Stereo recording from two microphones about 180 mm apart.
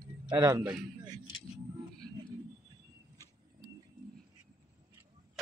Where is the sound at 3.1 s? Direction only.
20° right (ahead or behind).